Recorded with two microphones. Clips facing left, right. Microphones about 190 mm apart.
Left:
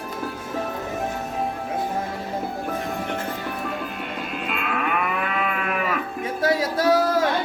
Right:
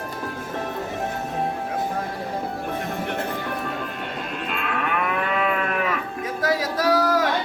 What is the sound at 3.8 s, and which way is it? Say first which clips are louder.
Livestock: even; 5° left (ahead or behind).